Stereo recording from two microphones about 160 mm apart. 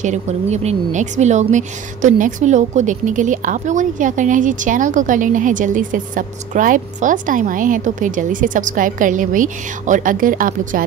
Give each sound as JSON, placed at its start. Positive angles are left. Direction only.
{"t": 0.0, "sound": "a woman's voice", "side_deg": -45}